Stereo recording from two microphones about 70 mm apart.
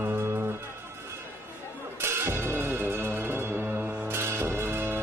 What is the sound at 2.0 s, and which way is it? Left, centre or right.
Music, right.